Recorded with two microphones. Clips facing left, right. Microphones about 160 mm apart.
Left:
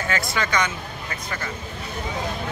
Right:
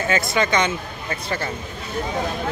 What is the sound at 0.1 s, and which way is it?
Speech, 20° right (ahead or behind).